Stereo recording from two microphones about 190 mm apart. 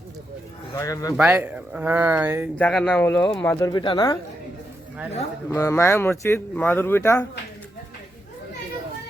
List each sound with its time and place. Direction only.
0.7 s a man's voice: 15° left (ahead or behind)
1.1 s speech: 5° right (ahead or behind)
2.6 s speech: 5° left (ahead or behind); by 4.2 s 20° left (ahead or behind)
5.5 s speech: 15° left (ahead or behind)